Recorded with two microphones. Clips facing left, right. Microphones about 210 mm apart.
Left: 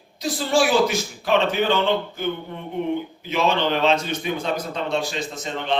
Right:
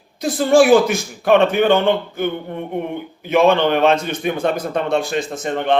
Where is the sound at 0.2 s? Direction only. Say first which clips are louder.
Right 8 dB; 55° right (ahead or behind).